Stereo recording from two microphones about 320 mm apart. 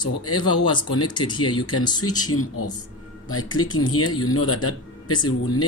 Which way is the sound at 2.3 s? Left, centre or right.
Left.